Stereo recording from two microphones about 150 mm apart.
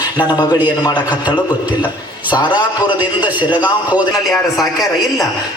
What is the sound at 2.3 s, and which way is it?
Speech, 30° left (ahead or behind).